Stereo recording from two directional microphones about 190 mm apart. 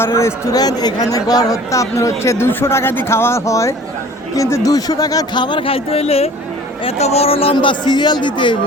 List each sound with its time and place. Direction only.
0.0 s a man's voice: 15° left (ahead or behind)